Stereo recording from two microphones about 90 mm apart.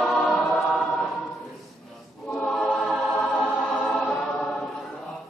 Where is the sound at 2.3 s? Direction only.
5° left (ahead or behind).